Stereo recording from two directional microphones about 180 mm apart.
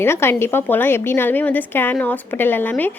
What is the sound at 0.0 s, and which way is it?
A woman's voice, 15° left (ahead or behind).